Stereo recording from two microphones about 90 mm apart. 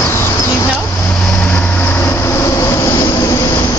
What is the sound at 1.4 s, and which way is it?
Vehicle, 20° left (ahead or behind).